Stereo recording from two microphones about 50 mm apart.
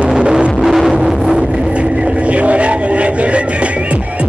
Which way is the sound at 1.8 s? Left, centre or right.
Right.